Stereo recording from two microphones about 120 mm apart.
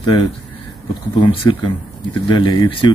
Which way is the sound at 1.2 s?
45° left (ahead or behind).